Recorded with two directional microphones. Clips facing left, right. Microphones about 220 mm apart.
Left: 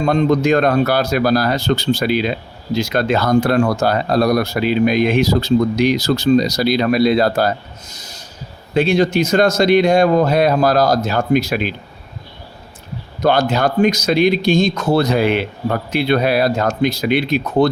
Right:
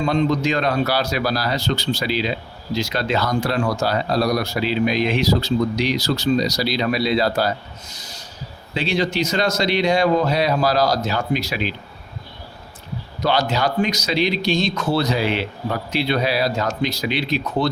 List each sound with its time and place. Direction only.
0.0 s speech: 50° left (ahead or behind)
8.7 s speech: 50° left (ahead or behind)
13.2 s speech: 50° left (ahead or behind)